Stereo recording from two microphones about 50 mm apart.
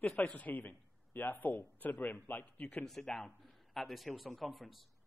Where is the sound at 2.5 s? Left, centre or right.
Left.